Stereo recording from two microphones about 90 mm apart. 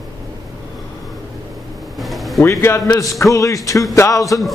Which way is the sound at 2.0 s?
Centre (ahead or behind).